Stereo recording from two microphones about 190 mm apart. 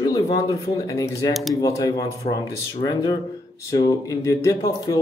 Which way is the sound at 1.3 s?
Centre (ahead or behind).